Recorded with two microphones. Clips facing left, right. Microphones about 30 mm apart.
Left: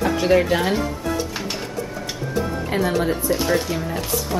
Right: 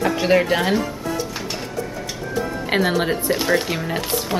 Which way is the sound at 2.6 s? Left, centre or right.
Right.